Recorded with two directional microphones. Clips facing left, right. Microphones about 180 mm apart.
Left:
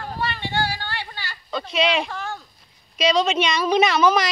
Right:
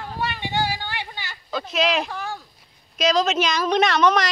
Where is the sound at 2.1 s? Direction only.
10° right (ahead or behind).